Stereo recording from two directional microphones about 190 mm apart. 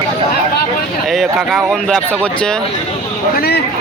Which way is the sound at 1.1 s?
Centre (ahead or behind).